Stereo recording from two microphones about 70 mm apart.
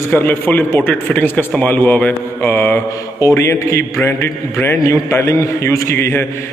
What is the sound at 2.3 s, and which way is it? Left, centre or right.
Speech, left.